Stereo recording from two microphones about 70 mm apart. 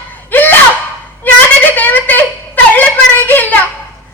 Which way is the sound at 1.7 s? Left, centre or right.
Left.